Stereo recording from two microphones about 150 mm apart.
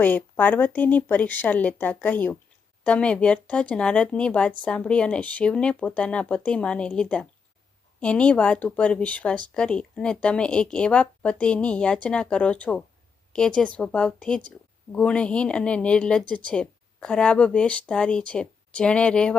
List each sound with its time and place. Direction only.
0.0 s speech: 10° left (ahead or behind)